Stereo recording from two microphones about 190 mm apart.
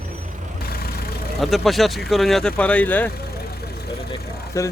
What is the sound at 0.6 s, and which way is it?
Vehicle, 55° left (ahead or behind).